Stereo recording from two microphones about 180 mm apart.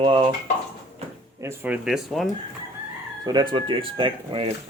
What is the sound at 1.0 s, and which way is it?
Drawer open or close, 35° right (ahead or behind).